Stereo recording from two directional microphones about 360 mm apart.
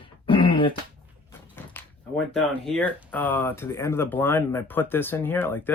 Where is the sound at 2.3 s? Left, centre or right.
Centre.